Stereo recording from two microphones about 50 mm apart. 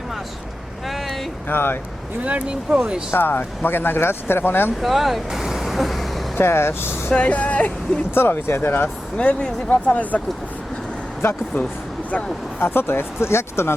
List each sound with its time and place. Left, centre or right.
0.9 s vehicle: centre
1.5 s speech: left
2.2 s speech: right
3.2 s speech: left
4.8 s speech: centre
6.3 s speech: left
7.1 s speech: left
8.1 s speech: left
9.1 s speech: left
11.2 s speech: left